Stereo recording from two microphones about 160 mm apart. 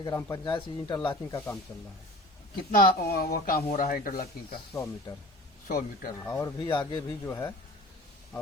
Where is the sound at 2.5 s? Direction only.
75° left (ahead or behind); by 4.2 s 60° left (ahead or behind).